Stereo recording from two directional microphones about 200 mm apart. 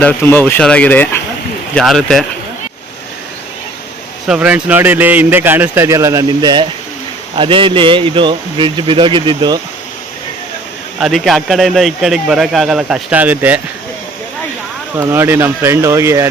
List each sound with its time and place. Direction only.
0.0 s speech: 10° left (ahead or behind)
4.3 s a man's voice: 5° right (ahead or behind); by 9.6 s 20° right (ahead or behind)
11.0 s speech: centre (ahead or behind)
14.9 s a man's voice: 15° right (ahead or behind)